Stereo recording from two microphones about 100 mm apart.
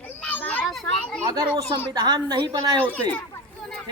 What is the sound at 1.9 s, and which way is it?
Speech, 45° right (ahead or behind).